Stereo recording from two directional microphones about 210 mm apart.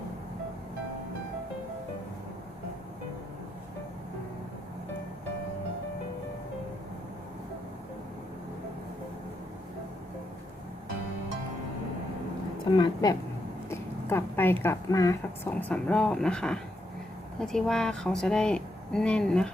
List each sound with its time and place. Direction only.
12.7 s a woman's voice: 20° left (ahead or behind)
15.7 s a woman's voice: 5° left (ahead or behind)